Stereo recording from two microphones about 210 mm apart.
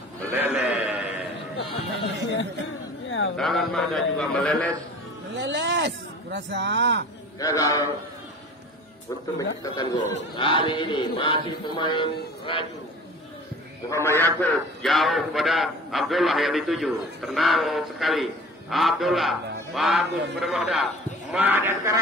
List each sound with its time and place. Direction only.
0.3 s sheep: 10° right (ahead or behind)
3.1 s a sound: 65° left (ahead or behind)
3.3 s a man's voice: centre (ahead or behind)
5.3 s speech: 60° right (ahead or behind)
7.3 s a man's voice: 15° left (ahead or behind)
9.6 s a sound: 20° left (ahead or behind)
13.8 s a man's voice: 15° left (ahead or behind)
14.4 s a man's voice: centre (ahead or behind)